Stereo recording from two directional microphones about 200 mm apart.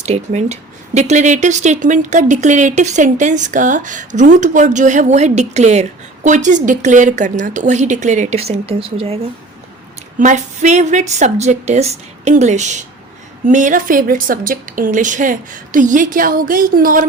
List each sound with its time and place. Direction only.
0.0 s a woman's voice: 35° right (ahead or behind)